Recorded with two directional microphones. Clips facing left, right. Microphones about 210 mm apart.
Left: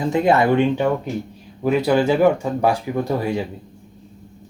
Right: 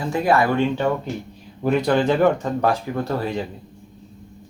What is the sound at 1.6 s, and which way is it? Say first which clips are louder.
Speech: left 1 dB; 5° left (ahead or behind).